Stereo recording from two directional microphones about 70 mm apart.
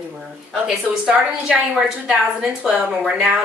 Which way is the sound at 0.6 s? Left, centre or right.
Centre.